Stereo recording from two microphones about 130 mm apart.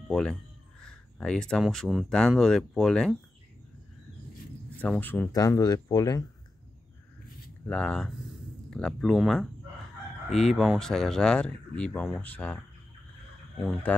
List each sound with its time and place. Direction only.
0.1 s speech: 5° left (ahead or behind)
4.7 s speech: 10° left (ahead or behind)
5.3 s speech: 30° left (ahead or behind)
7.6 s speech: 10° left (ahead or behind)
13.6 s speech: 5° left (ahead or behind)